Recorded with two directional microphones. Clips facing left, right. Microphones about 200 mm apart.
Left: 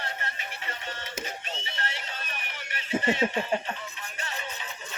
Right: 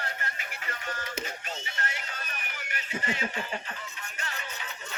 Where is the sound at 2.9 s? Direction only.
25° left (ahead or behind).